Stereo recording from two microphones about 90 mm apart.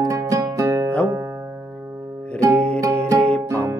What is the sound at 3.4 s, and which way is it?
Music, 35° right (ahead or behind).